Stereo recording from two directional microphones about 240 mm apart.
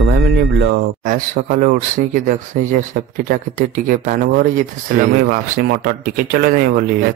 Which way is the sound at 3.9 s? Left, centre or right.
Right.